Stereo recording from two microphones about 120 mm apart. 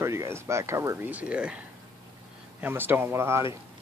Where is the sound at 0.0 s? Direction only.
25° right (ahead or behind).